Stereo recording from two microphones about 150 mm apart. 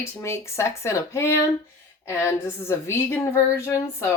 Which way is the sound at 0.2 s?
20° left (ahead or behind).